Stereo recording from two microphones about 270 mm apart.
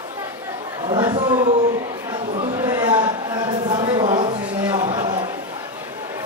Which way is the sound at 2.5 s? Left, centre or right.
Centre.